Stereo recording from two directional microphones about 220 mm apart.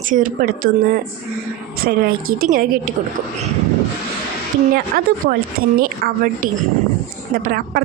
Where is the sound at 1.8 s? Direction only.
45° right (ahead or behind).